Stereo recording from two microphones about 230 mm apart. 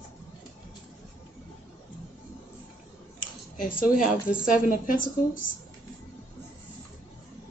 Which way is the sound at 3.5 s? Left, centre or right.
Left.